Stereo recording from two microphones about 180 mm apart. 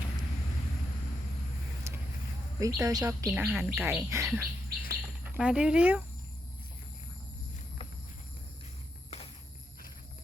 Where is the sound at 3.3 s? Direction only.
5° right (ahead or behind).